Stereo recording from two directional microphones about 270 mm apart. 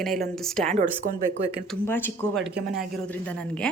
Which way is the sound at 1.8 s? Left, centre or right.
Centre.